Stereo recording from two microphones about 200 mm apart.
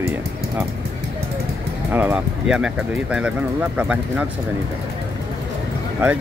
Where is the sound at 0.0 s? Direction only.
15° right (ahead or behind).